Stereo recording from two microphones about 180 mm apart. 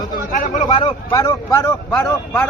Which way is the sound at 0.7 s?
25° left (ahead or behind).